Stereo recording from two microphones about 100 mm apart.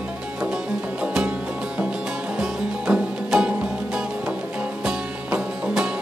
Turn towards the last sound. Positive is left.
turn(degrees=-5)  # may be behind; listen again after turning